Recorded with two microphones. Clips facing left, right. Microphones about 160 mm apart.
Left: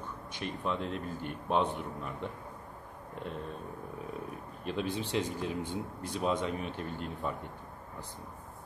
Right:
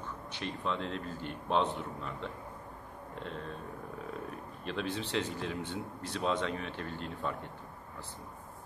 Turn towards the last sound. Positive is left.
turn(degrees=10)  # may be behind; listen again after turning